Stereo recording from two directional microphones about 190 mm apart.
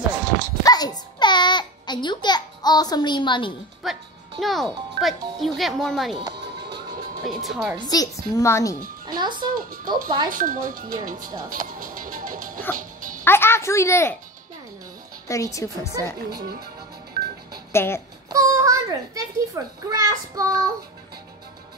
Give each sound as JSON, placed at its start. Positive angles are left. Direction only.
{"t": 0.7, "sound": "babbling", "side_deg": 20}
{"t": 3.8, "sound": "music", "side_deg": 0}
{"t": 4.4, "sound": "a child's voice", "side_deg": 0}
{"t": 7.2, "sound": "a child's voice", "side_deg": 0}
{"t": 7.9, "sound": "speech", "side_deg": 20}
{"t": 9.0, "sound": "speech", "side_deg": -20}
{"t": 10.3, "sound": "speech", "side_deg": -45}
{"t": 11.4, "sound": "music", "side_deg": -45}
{"t": 13.2, "sound": "speech", "side_deg": 10}
{"t": 15.2, "sound": "speech", "side_deg": 15}
{"t": 17.7, "sound": "speech", "side_deg": 15}
{"t": 18.3, "sound": "a child's voice", "side_deg": -15}